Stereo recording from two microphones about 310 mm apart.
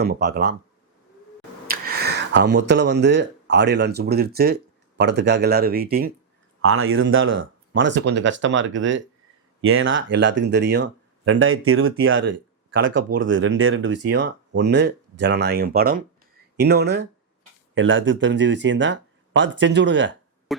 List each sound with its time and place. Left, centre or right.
0.0 s speech: right
1.6 s speech: right
6.6 s speech: right
20.5 s a sound: centre